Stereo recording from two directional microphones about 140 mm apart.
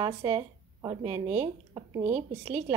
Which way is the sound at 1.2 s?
50° right (ahead or behind).